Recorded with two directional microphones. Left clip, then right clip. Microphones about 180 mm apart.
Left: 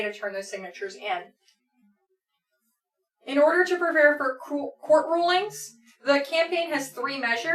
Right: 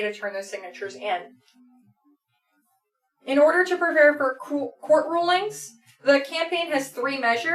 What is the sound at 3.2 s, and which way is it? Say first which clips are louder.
Speech: right 2 dB; 15° right (ahead or behind).